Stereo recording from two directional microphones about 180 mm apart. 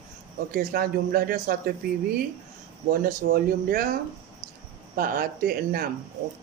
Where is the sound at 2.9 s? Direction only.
55° right (ahead or behind).